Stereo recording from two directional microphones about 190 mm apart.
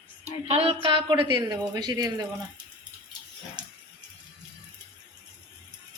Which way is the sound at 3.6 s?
20° right (ahead or behind).